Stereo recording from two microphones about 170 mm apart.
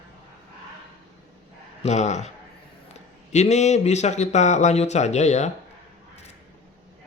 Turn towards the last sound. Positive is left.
turn(degrees=40)  # may be behind; listen again after turning